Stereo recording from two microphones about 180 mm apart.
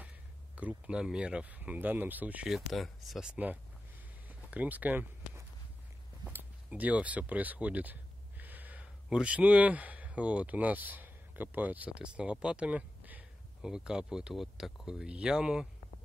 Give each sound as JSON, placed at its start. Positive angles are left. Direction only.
{"t": 0.6, "sound": "speech", "side_deg": -5}
{"t": 4.3, "sound": "a sound", "side_deg": -10}
{"t": 6.2, "sound": "speech", "side_deg": -10}